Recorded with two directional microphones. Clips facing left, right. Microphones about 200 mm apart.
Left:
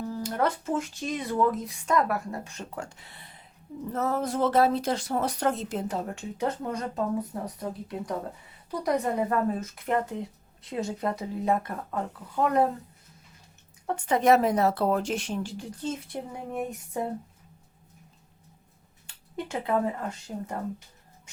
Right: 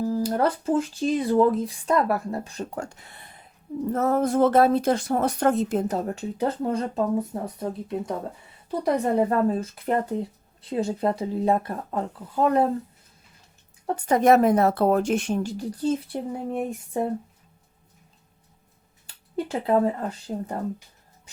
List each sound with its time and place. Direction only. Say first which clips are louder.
0.0 s speech: right 5 dB; 35° right (ahead or behind)
13.8 s speech: right 4 dB; 40° right (ahead or behind)
19.0 s speech: right 6 dB; 35° right (ahead or behind)